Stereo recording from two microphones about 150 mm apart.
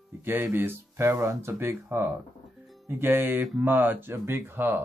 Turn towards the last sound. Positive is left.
turn(degrees=-15)  # may be behind; listen again after turning